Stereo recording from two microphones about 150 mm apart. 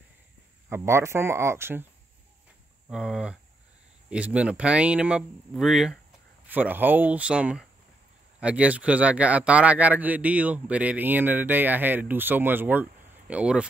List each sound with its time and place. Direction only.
0.7 s speech: 15° right (ahead or behind)
2.9 s speech: 5° right (ahead or behind)